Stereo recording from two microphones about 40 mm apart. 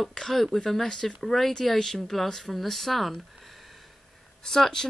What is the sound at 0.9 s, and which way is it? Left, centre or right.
Speech, centre.